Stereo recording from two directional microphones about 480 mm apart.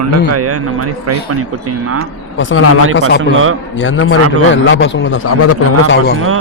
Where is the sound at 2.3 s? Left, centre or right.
Left.